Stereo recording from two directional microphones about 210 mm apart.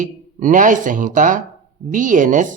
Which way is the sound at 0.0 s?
40° right (ahead or behind).